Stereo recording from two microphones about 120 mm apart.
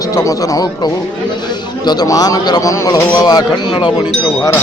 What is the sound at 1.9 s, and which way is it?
A man's voice, 30° left (ahead or behind).